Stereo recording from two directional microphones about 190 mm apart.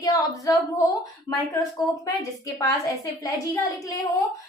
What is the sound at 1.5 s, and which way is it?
Speech, 20° left (ahead or behind).